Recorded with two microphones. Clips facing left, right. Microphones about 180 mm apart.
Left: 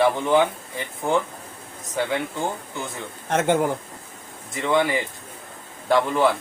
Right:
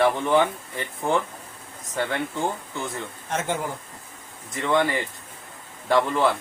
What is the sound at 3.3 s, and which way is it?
Speech, 60° left (ahead or behind).